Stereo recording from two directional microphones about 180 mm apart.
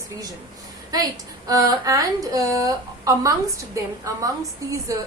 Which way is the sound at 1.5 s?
20° right (ahead or behind).